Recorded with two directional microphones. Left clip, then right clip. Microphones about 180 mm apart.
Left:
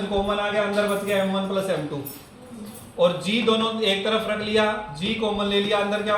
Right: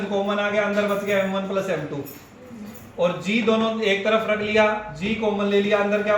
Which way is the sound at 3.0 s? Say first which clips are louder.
Left 1 dB; 15° left (ahead or behind).